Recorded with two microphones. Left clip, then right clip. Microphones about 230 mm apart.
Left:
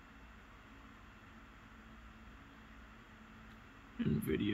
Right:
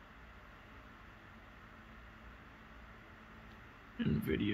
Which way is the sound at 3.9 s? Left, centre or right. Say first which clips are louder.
Right 1 dB; centre.